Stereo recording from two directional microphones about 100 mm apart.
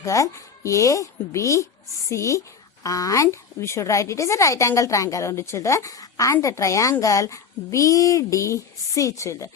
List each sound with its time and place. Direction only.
0.0 s a woman's voice: 30° left (ahead or behind)